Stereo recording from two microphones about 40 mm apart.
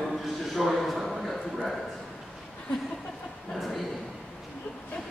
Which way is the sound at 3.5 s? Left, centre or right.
Centre.